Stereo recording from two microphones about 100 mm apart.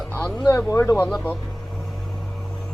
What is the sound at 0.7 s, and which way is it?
Speech, 30° left (ahead or behind).